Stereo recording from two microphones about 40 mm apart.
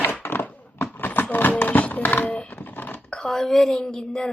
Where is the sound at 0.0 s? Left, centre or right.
Left.